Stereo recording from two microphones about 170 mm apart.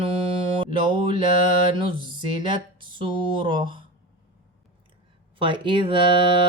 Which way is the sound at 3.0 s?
30° right (ahead or behind).